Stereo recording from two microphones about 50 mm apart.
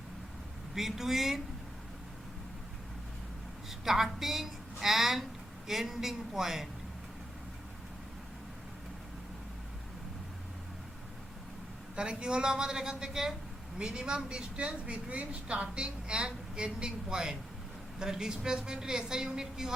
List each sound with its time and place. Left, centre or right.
0.7 s a woman's voice: centre
3.7 s a woman's voice: centre
11.9 s a woman's voice: centre